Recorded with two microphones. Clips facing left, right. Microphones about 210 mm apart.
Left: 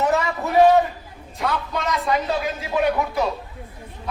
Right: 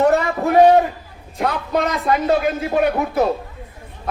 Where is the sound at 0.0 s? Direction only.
55° right (ahead or behind).